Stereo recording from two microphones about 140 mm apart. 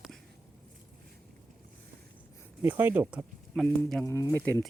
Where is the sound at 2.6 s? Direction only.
15° right (ahead or behind); by 4.0 s centre (ahead or behind).